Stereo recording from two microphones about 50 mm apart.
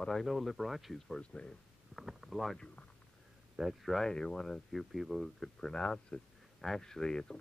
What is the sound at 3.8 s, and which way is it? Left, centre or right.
Speech, centre.